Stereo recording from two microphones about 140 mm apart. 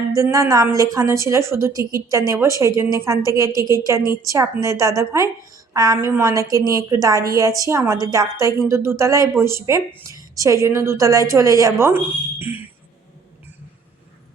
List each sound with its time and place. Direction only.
0.1 s a woman's voice: 25° right (ahead or behind)